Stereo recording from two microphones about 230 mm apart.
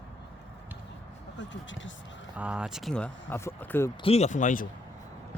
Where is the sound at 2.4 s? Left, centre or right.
Centre.